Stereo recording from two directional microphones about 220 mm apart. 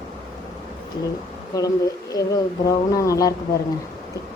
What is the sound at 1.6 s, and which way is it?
Speech, 15° left (ahead or behind).